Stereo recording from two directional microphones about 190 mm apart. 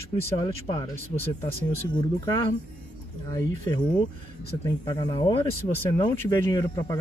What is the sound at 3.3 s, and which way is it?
Speech, 20° left (ahead or behind).